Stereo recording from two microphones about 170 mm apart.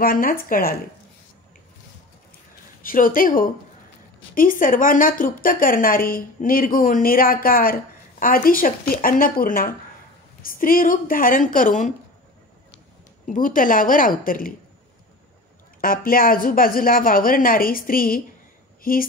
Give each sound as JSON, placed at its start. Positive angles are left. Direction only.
{"t": 0.0, "sound": "a woman's voice", "side_deg": 55}
{"t": 2.8, "sound": "a woman's voice", "side_deg": 55}
{"t": 13.3, "sound": "a woman's voice", "side_deg": 50}
{"t": 15.8, "sound": "a woman's voice", "side_deg": 55}